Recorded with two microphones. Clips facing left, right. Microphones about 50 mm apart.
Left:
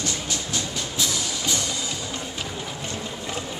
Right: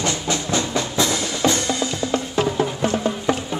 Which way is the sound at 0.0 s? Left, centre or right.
Right.